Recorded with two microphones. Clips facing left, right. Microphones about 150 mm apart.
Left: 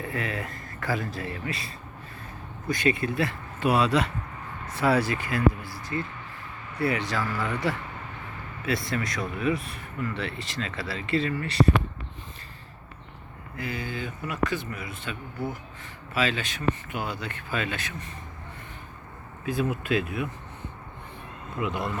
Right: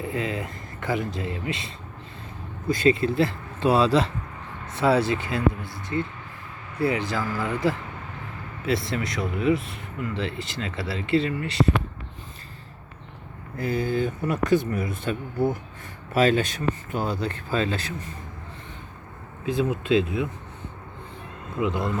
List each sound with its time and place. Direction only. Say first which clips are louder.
0.0 s speech: right 3 dB; 20° right (ahead or behind)
13.6 s speech: right 9 dB; 40° right (ahead or behind)
19.5 s speech: right 4 dB; 20° right (ahead or behind)